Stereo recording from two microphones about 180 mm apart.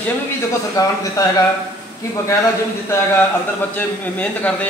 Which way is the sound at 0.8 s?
20° left (ahead or behind).